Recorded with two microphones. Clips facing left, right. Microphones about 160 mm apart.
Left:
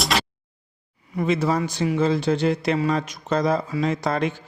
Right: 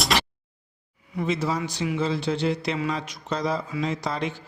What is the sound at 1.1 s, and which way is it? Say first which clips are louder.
Speech: left 4 dB; 55° left (ahead or behind).